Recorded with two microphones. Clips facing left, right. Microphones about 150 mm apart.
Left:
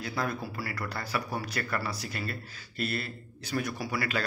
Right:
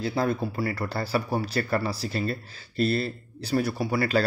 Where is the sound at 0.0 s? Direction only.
30° right (ahead or behind).